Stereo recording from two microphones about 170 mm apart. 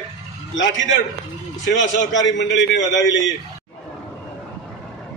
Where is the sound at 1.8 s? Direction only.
90° left.